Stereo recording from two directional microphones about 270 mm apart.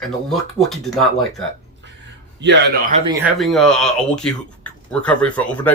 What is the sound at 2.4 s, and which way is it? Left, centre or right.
Speech, right.